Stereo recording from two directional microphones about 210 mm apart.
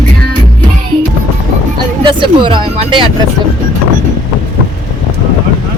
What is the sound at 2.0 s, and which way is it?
Speech, 25° right (ahead or behind).